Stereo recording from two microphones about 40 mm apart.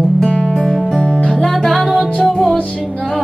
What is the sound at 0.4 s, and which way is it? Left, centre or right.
Music, centre.